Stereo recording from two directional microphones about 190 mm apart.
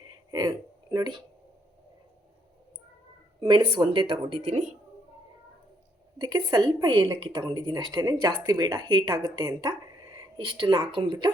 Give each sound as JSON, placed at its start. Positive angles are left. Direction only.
{"t": 0.1, "sound": "a sound", "side_deg": -20}
{"t": 3.4, "sound": "a woman's voice", "side_deg": -25}
{"t": 6.1, "sound": "a woman's voice", "side_deg": -20}